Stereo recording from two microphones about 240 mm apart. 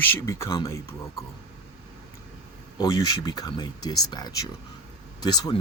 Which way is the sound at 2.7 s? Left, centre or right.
Centre.